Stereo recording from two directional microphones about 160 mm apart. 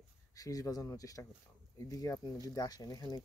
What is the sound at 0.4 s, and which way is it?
Speech, 20° left (ahead or behind).